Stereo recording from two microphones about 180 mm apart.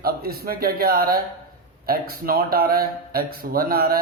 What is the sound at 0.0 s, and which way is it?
Speech, 55° right (ahead or behind).